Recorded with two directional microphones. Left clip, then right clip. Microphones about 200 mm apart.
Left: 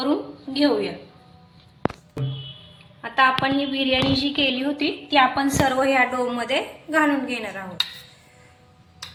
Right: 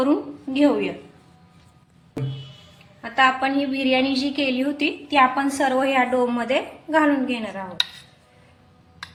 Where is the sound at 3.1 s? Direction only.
15° right (ahead or behind).